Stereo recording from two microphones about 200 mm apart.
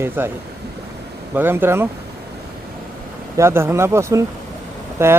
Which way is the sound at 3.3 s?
15° right (ahead or behind).